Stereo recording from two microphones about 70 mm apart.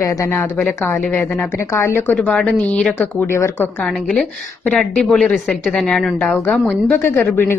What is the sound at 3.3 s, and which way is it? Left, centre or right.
Speech, left.